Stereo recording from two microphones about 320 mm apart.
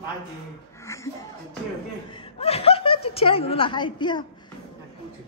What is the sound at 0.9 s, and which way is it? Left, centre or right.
Speech, centre.